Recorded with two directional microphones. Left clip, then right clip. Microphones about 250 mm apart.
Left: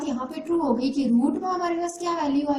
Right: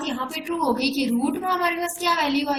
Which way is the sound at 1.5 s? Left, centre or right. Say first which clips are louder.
Right 3 dB; right.